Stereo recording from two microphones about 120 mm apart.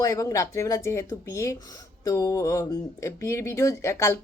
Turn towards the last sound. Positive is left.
turn(degrees=25)  # may be behind; listen again after turning